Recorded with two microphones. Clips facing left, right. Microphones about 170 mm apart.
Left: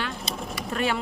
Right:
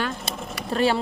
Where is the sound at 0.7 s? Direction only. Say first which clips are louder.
Right 5 dB; 30° right (ahead or behind).